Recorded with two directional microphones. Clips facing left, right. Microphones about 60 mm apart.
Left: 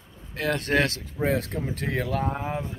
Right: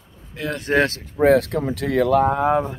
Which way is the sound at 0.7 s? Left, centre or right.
Right.